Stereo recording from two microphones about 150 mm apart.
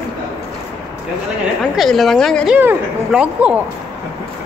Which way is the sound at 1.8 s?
Centre (ahead or behind).